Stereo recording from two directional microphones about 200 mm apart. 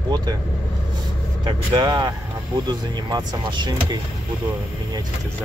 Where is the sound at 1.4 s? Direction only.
25° right (ahead or behind).